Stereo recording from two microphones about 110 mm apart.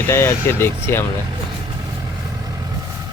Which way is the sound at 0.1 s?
25° left (ahead or behind).